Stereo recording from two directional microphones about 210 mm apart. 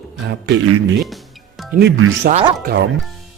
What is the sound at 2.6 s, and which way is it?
Speech, 45° right (ahead or behind).